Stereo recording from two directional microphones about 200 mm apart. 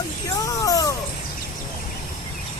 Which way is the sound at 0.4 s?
15° left (ahead or behind).